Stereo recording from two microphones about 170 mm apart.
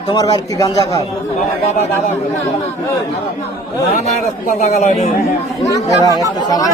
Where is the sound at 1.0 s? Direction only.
40° left (ahead or behind).